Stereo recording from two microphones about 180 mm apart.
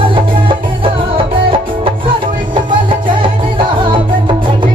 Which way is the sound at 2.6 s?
25° right (ahead or behind).